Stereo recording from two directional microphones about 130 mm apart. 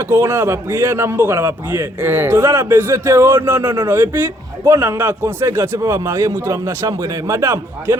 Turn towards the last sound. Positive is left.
turn(degrees=-20)  # may be behind; listen again after turning